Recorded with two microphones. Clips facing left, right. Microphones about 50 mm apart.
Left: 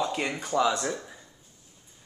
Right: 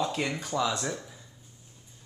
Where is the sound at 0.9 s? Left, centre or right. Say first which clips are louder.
Left 2 dB; left.